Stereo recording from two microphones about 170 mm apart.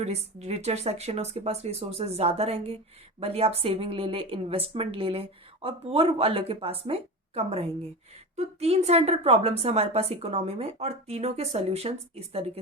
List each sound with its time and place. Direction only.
0.0 s a woman's voice: 40° right (ahead or behind)